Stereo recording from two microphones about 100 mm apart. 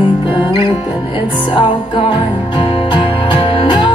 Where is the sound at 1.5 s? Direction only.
50° left (ahead or behind).